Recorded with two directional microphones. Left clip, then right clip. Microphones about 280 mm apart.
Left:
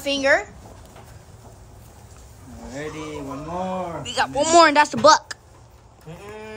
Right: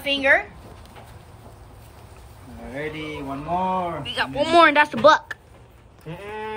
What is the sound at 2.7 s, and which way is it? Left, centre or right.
Speech, centre.